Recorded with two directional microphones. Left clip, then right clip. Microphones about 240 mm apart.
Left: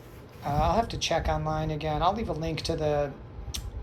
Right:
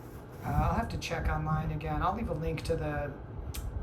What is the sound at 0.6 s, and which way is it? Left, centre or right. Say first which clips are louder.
Speech: left 7 dB; centre.